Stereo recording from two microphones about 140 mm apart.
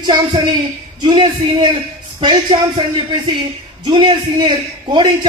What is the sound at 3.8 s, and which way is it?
A man's voice, 35° right (ahead or behind).